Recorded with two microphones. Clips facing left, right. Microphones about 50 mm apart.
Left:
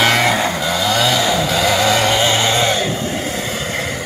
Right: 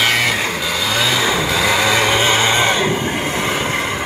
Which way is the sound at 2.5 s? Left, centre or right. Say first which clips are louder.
Right 1 dB; right.